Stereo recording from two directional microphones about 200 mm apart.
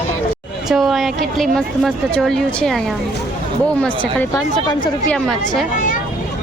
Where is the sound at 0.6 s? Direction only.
Centre (ahead or behind).